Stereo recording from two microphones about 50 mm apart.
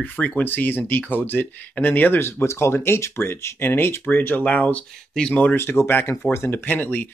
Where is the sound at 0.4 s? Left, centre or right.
Left.